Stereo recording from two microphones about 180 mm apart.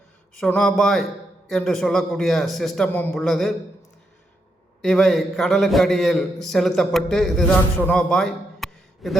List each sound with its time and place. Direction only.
0.3 s a man's voice: centre (ahead or behind)
4.8 s a man's voice: centre (ahead or behind)